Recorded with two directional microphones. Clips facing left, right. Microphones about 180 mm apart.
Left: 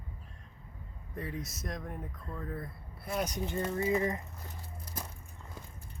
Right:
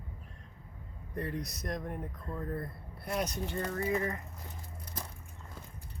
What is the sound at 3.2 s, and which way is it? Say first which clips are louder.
Speech: left 2 dB; 15° left (ahead or behind).